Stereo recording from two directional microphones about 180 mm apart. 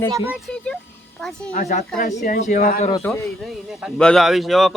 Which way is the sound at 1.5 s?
50° left (ahead or behind).